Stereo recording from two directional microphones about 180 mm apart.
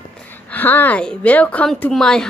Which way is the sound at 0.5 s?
10° left (ahead or behind).